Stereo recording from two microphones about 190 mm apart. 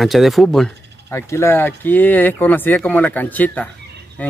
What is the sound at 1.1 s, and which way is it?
Speech, 15° left (ahead or behind).